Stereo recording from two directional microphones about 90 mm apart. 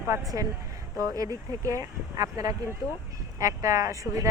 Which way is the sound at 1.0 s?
40° right (ahead or behind).